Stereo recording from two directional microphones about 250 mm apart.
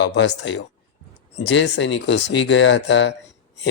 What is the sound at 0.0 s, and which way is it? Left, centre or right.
Speech, left.